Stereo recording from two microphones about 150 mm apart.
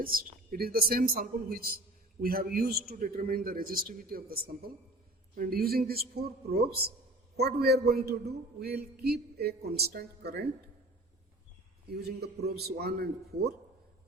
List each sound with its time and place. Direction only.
0.0 s a man's voice: 75° right (ahead or behind); by 10.5 s 90° right
11.9 s a man's voice: 90° right